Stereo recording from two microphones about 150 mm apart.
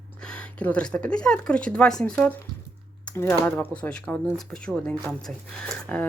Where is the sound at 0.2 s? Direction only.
5° left (ahead or behind).